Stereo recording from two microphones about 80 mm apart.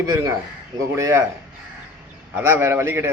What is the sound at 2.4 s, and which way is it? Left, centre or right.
Speech, right.